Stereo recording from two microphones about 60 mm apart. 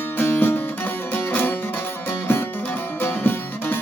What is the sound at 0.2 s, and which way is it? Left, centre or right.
Music, left.